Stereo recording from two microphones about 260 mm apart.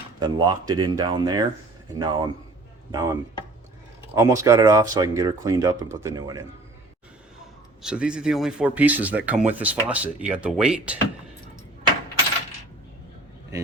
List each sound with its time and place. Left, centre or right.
0.2 s speech: centre
7.8 s speech: centre